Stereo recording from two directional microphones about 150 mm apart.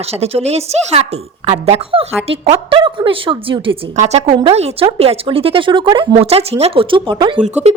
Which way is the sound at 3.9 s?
50° right (ahead or behind).